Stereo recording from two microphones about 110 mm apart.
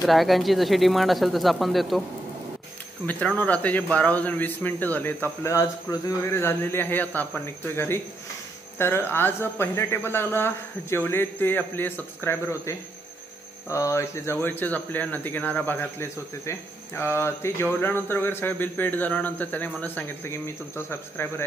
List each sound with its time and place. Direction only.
0.0 s speech: centre (ahead or behind)
3.1 s a man's voice: 15° left (ahead or behind)